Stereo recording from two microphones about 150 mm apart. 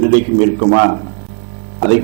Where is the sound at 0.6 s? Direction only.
15° right (ahead or behind).